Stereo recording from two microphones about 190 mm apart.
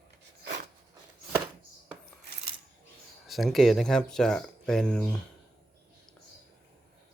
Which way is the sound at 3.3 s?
Centre (ahead or behind).